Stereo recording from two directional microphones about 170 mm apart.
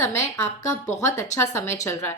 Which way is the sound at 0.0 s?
15° left (ahead or behind).